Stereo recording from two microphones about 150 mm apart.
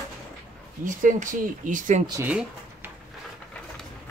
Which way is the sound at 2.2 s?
10° right (ahead or behind).